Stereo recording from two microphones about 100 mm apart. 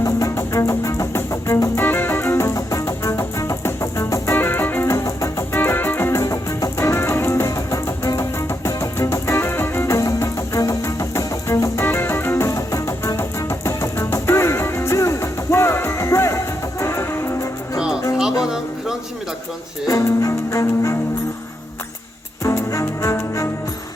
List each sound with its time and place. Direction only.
0.0 s music: 30° left (ahead or behind)
1.8 s music: 20° left (ahead or behind)
4.9 s music: 35° left (ahead or behind)
5.5 s music: 20° left (ahead or behind)
18.4 s a sound: 5° right (ahead or behind)
19.9 s music: 35° left (ahead or behind)
22.4 s music: 30° left (ahead or behind)